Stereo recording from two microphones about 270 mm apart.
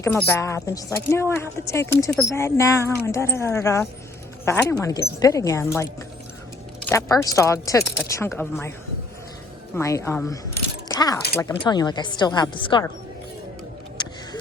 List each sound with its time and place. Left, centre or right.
0.0 s speech: centre
6.8 s speech: centre
9.7 s speech: centre
10.8 s keys jangling: centre
11.3 s speech: centre